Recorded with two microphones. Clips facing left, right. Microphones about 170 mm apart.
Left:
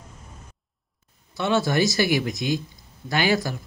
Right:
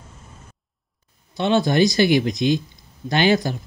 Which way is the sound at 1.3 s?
20° right (ahead or behind).